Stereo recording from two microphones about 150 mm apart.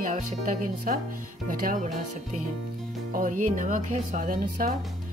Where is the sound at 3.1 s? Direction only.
60° right (ahead or behind).